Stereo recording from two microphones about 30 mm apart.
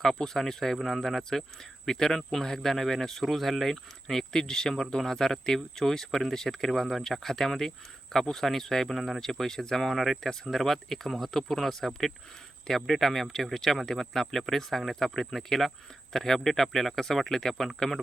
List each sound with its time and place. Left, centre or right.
0.0 s speech: centre
3.2 s speech: centre
4.0 s speech: centre
8.9 s speech: centre
9.9 s speech: centre